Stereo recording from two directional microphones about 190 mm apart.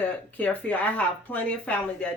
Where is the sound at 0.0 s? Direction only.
5° left (ahead or behind).